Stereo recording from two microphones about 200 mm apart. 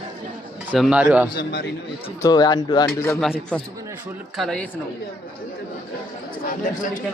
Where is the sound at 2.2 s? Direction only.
20° left (ahead or behind).